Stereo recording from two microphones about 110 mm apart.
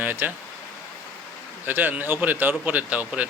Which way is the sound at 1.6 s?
15° right (ahead or behind).